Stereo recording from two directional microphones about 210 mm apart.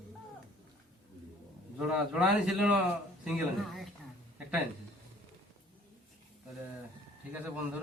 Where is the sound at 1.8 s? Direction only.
5° right (ahead or behind).